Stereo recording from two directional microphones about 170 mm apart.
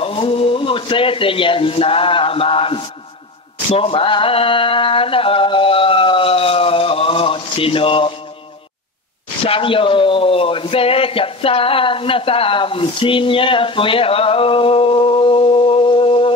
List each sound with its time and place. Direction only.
0.0 s a man's voice: 30° left (ahead or behind)
9.4 s a man's voice: 30° left (ahead or behind)